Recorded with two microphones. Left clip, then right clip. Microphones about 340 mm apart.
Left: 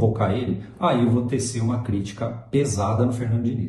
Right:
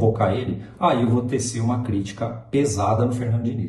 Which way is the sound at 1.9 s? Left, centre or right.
Centre.